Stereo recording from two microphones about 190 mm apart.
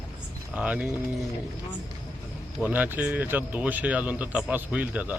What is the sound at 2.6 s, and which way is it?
Speech, 10° right (ahead or behind).